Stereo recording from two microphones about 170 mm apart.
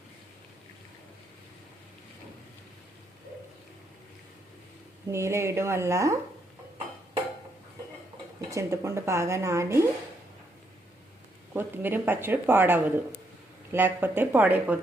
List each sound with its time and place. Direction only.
5.1 s speech: 15° right (ahead or behind)
8.4 s speech: 20° right (ahead or behind)
11.5 s speech: 10° right (ahead or behind)